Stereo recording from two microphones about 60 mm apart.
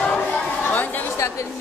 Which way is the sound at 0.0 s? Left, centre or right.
Centre.